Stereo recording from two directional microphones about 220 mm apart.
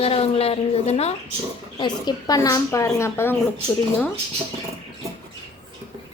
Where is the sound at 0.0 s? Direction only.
25° left (ahead or behind).